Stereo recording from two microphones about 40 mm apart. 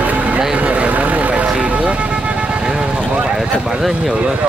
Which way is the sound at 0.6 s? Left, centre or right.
Right.